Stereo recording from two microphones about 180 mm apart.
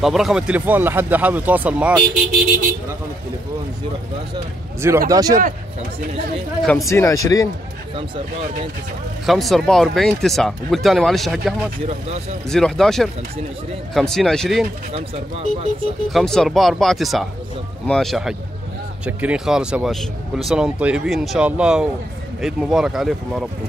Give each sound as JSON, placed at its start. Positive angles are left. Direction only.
{"t": 0.0, "sound": "speech", "side_deg": 0}
{"t": 4.8, "sound": "speech", "side_deg": -15}
{"t": 5.3, "sound": "speech", "side_deg": -50}
{"t": 6.6, "sound": "speech", "side_deg": 0}
{"t": 6.9, "sound": "speech", "side_deg": 15}
{"t": 9.2, "sound": "speech", "side_deg": 0}
{"t": 14.9, "sound": "speech", "side_deg": -35}
{"t": 16.1, "sound": "speech", "side_deg": 0}